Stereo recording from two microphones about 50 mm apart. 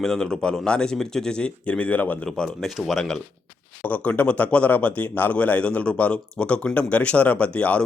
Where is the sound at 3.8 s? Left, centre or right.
Left.